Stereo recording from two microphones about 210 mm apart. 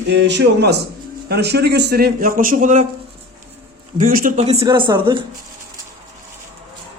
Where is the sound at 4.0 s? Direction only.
40° right (ahead or behind); by 5.2 s 20° right (ahead or behind).